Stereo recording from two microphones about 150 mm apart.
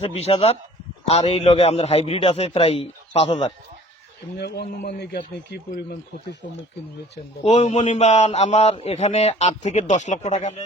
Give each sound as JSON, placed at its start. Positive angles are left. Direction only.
{"t": 0.0, "sound": "a man's voice", "side_deg": 45}
{"t": 4.4, "sound": "a man's voice", "side_deg": 90}
{"t": 7.4, "sound": "a man's voice", "side_deg": 45}